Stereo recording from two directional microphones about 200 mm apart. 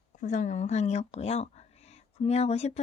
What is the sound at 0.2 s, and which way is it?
A woman's voice, 40° left (ahead or behind).